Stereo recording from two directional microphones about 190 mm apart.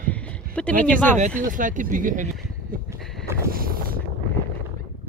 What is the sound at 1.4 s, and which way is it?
Speech, 45° right (ahead or behind).